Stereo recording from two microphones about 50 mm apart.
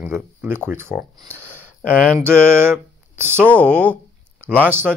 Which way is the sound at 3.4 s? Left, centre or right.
Left.